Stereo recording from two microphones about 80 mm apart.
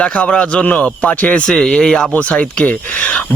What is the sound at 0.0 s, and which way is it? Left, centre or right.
A man's voice, centre.